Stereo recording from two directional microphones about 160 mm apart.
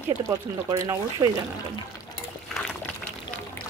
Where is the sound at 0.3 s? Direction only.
20° right (ahead or behind).